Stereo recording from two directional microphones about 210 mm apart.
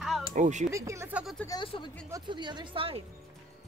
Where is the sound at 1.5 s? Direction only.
20° left (ahead or behind).